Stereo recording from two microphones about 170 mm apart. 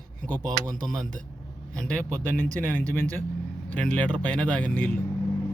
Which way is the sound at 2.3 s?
50° right (ahead or behind).